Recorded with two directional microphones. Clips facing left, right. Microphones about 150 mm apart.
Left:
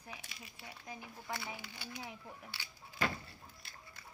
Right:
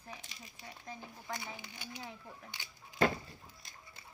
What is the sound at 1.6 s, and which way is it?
Speech, 20° right (ahead or behind).